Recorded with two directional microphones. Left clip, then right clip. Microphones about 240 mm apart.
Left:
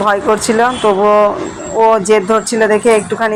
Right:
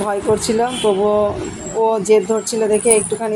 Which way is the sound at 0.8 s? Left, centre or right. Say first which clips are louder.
Left 6 dB; left.